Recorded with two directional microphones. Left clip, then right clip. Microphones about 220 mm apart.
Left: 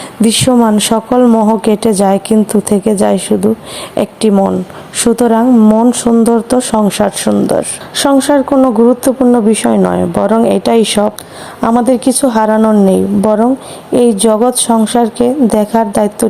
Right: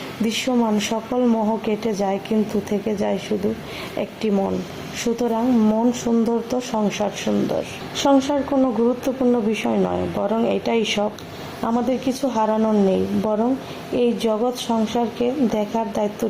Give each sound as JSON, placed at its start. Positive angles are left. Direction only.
{"t": 0.2, "sound": "speech", "side_deg": 35}